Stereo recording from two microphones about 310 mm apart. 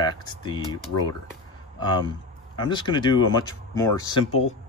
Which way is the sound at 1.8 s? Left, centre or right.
Centre.